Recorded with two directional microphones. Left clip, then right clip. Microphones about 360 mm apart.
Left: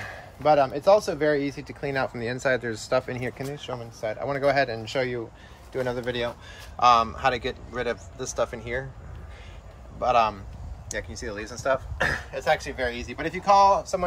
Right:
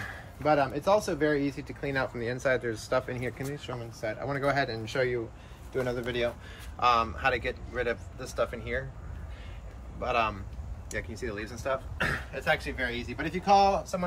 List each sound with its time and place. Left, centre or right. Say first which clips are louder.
0.1 s a man's voice: left 6 dB; left
9.9 s a man's voice: left 7 dB; centre